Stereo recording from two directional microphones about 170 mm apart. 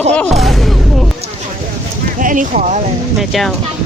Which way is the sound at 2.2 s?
50° right (ahead or behind).